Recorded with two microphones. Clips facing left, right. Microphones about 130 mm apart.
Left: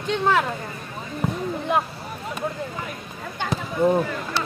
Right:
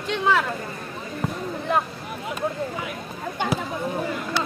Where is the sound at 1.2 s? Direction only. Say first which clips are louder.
Left 3 dB; centre (ahead or behind).